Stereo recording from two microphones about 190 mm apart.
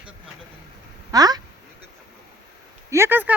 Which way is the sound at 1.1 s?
20° right (ahead or behind).